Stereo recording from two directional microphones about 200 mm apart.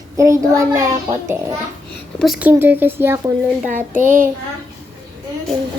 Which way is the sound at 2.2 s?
5° right (ahead or behind).